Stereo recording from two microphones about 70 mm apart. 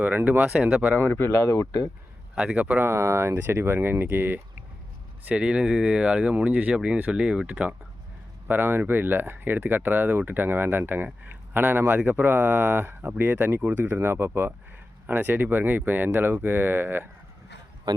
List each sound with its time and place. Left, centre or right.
0.0 s speech: right
1.4 s speech: left
2.3 s speech: centre
2.8 s speech: right
5.3 s speech: centre
8.4 s speech: right